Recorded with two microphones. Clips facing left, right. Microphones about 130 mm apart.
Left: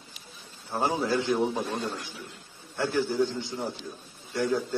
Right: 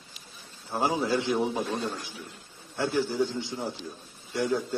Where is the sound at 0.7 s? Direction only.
Centre (ahead or behind).